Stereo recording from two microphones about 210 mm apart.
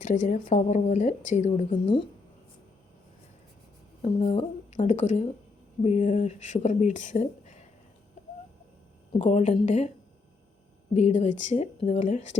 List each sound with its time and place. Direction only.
0.0 s speech: 35° left (ahead or behind)
1.7 s speech: 25° left (ahead or behind)
4.0 s speech: 30° left (ahead or behind)
9.1 s speech: 30° left (ahead or behind)
10.9 s speech: 30° left (ahead or behind)